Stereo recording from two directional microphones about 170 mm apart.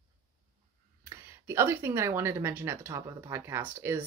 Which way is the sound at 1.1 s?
15° right (ahead or behind).